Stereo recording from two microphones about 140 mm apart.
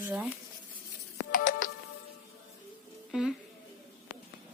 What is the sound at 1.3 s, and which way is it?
Music, 75° left (ahead or behind).